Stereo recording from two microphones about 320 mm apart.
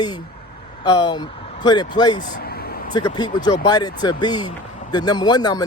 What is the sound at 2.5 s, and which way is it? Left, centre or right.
Vehicle, left.